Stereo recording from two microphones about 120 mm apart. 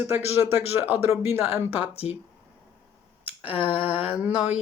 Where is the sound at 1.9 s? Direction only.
55° left (ahead or behind).